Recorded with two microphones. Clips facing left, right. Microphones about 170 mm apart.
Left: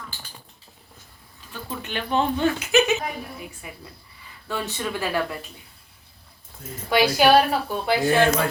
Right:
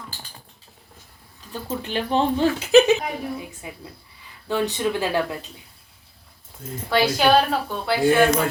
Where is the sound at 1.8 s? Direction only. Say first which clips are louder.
Right 2 dB; 30° right (ahead or behind).